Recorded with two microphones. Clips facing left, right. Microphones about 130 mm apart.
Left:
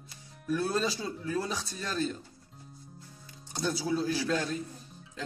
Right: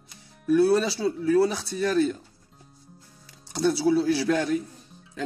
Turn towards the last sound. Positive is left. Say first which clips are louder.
# right 7 dB
turn(degrees=-70)  # may be behind; listen again after turning